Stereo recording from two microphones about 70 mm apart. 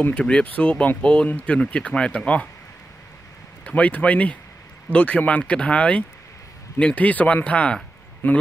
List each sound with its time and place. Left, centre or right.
0.2 s speech: centre
3.6 s speech: centre